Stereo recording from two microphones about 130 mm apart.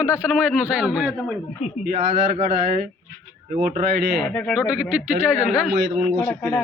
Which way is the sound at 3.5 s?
70° right (ahead or behind).